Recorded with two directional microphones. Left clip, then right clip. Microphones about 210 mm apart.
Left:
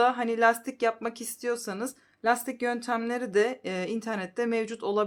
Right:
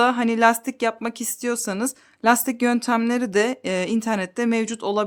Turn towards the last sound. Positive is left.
turn(degrees=-35)  # may be behind; listen again after turning